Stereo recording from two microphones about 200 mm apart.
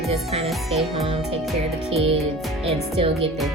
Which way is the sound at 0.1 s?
30° right (ahead or behind).